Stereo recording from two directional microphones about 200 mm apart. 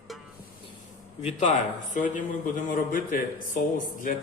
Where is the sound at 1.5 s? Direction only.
40° left (ahead or behind).